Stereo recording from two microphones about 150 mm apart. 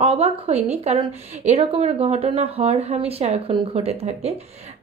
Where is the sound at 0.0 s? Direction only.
45° right (ahead or behind).